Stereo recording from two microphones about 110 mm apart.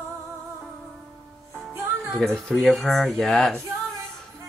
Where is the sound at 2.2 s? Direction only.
5° left (ahead or behind).